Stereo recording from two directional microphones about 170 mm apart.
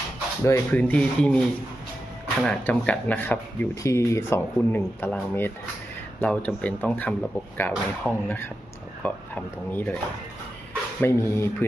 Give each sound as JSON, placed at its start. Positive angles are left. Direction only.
{"t": 0.4, "sound": "speech", "side_deg": 15}
{"t": 2.4, "sound": "speech", "side_deg": 5}
{"t": 11.0, "sound": "speech", "side_deg": 15}